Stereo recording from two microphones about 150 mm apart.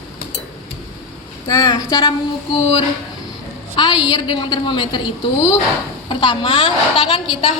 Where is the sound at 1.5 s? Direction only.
25° left (ahead or behind).